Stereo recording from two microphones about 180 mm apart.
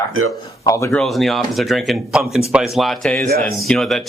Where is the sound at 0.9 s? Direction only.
Centre (ahead or behind).